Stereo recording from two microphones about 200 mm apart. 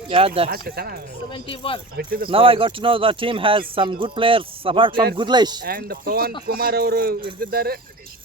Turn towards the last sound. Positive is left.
turn(degrees=-50)  # may be behind; listen again after turning